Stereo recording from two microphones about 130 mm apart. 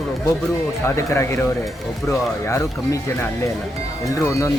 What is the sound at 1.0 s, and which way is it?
Speech, 20° left (ahead or behind).